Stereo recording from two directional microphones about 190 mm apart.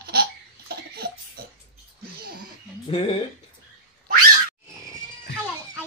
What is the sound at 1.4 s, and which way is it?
Music, 55° right (ahead or behind).